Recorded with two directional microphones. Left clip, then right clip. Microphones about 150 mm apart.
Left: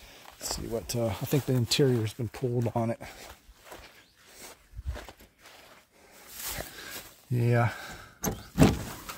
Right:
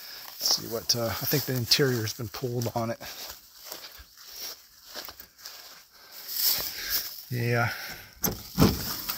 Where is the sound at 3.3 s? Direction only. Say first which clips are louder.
Right 5 dB; 65° right (ahead or behind).